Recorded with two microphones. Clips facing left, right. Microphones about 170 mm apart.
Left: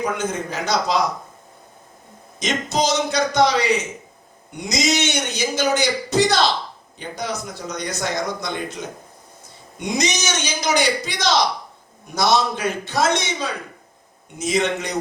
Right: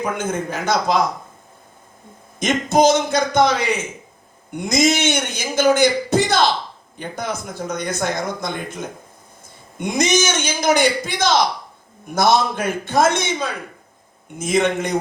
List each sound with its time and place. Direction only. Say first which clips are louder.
0.0 s speech: right 1 dB; 50° right (ahead or behind)
2.4 s speech: right 6 dB; 55° right (ahead or behind)